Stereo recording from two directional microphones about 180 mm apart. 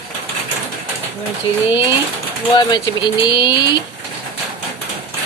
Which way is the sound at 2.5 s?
25° left (ahead or behind).